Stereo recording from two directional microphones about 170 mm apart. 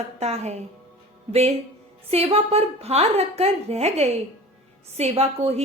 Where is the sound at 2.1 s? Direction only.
35° right (ahead or behind).